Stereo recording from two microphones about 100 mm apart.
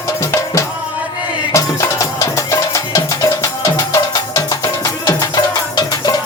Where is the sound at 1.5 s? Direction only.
35° left (ahead or behind).